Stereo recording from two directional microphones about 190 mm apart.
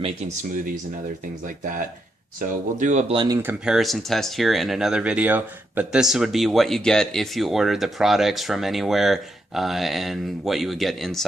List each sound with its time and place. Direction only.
0.0 s speech: 35° right (ahead or behind)
2.4 s speech: 40° right (ahead or behind)
3.2 s speech: 15° right (ahead or behind)
3.8 s speech: centre (ahead or behind)